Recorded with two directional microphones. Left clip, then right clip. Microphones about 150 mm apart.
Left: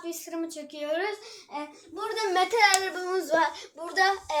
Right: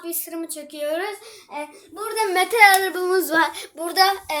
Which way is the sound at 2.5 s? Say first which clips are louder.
Right 11 dB; 45° right (ahead or behind).